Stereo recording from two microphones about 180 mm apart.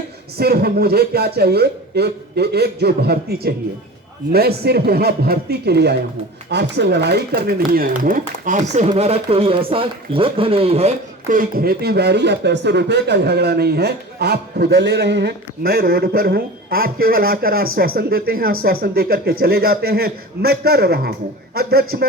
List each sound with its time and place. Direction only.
0.3 s speech: 60° right (ahead or behind); by 10.9 s 35° right (ahead or behind)
11.3 s speech: 50° right (ahead or behind)